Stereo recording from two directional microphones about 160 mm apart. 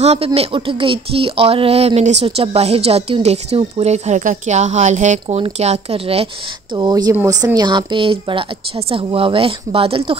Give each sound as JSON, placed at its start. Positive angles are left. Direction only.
{"t": 0.0, "sound": "speech", "side_deg": -40}
{"t": 6.7, "sound": "speech", "side_deg": -25}